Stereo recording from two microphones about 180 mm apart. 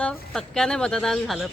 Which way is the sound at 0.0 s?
5° left (ahead or behind).